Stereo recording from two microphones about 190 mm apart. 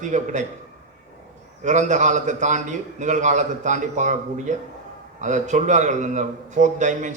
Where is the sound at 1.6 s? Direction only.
40° right (ahead or behind).